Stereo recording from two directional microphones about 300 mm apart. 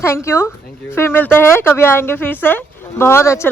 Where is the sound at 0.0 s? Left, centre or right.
Centre.